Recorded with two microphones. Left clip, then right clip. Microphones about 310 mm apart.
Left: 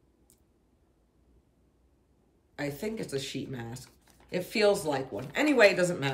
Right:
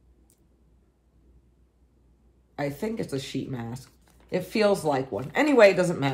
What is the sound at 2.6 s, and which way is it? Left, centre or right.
Speech, centre.